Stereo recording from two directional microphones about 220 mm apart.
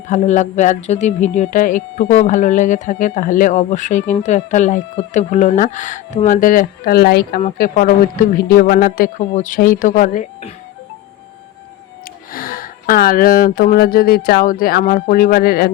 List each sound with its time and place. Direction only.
0.1 s speech: 30° left (ahead or behind)
12.3 s speech: 40° left (ahead or behind)